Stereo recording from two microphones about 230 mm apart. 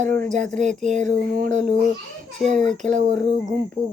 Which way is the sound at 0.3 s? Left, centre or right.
Right.